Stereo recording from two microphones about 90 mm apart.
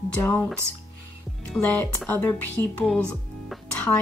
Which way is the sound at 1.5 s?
15° left (ahead or behind).